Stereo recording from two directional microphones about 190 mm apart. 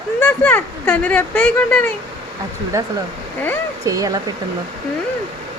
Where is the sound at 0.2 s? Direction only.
10° left (ahead or behind).